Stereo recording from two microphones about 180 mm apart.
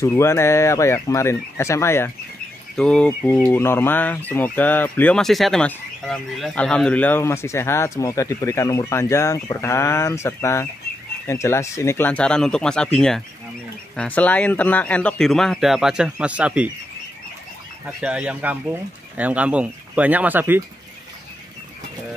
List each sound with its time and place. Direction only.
0.0 s speech: 15° left (ahead or behind); by 16.7 s 5° right (ahead or behind)
18.0 s speech: 5° right (ahead or behind)